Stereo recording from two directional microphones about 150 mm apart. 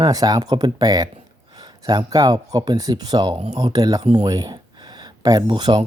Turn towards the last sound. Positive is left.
turn(degrees=-30)  # may be behind; listen again after turning